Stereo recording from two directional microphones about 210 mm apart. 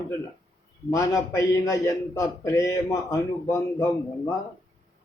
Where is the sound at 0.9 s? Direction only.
15° left (ahead or behind).